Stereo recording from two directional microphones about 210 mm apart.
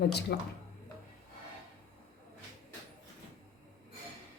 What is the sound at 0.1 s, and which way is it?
Speech, 50° left (ahead or behind).